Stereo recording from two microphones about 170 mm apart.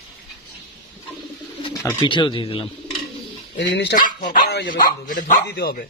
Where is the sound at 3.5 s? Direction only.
90° left.